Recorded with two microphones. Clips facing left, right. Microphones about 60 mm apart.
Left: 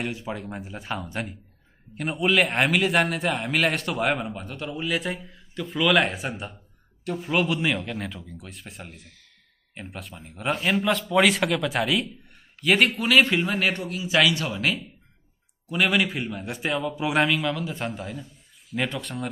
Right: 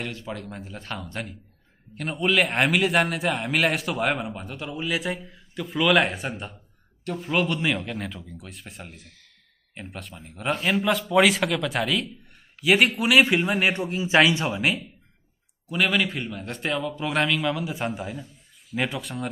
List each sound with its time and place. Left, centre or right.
0.0 s a man's voice: centre; by 14.9 s right
15.7 s a man's voice: centre